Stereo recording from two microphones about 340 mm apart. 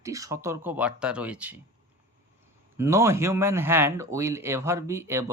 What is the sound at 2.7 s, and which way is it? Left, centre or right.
Speech, centre.